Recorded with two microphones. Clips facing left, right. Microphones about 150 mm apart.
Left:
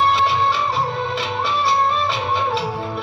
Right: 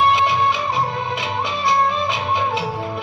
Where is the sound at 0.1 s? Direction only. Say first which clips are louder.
Right 1 dB; 15° right (ahead or behind).